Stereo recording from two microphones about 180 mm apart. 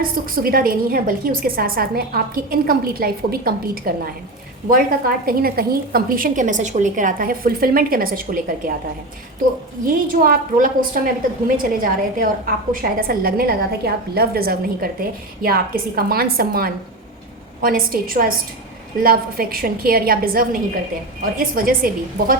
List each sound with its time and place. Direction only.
0.0 s a woman's voice: 55° right (ahead or behind)
9.8 s a woman's voice: 50° right (ahead or behind)